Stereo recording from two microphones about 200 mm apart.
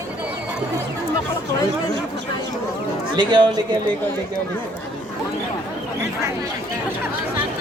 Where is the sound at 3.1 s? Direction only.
25° right (ahead or behind).